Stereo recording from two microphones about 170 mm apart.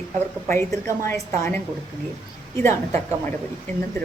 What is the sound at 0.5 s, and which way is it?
A woman's voice, 15° left (ahead or behind).